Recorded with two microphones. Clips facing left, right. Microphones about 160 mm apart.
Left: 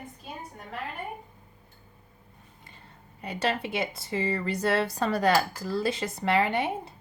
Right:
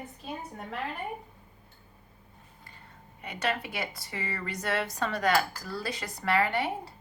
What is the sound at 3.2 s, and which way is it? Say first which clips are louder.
Speech: left 3 dB; 30° left (ahead or behind).